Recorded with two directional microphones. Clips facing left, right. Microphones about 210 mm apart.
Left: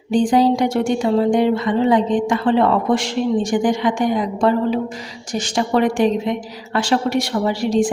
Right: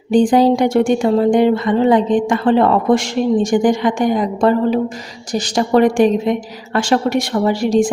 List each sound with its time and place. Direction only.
0.1 s a woman's voice: 55° right (ahead or behind)